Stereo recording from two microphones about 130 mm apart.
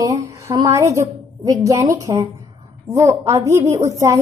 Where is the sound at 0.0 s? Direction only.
25° right (ahead or behind).